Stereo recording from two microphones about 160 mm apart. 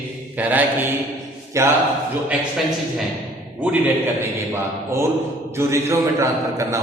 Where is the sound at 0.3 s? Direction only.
10° right (ahead or behind).